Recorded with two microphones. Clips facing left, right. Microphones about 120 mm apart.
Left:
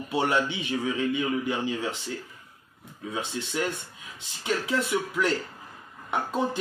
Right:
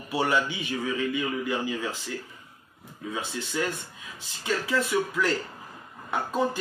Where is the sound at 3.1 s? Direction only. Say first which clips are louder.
Left 1 dB; 20° left (ahead or behind).